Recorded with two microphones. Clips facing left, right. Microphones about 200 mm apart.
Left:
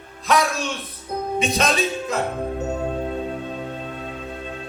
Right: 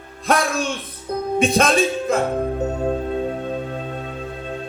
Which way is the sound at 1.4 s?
50° right (ahead or behind).